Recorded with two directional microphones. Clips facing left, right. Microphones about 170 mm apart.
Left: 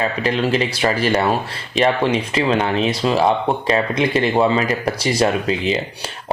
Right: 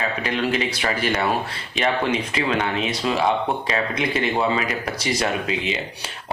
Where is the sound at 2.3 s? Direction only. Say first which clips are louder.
Left 5 dB; 30° left (ahead or behind).